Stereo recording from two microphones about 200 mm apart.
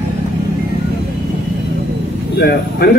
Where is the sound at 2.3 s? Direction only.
50° left (ahead or behind).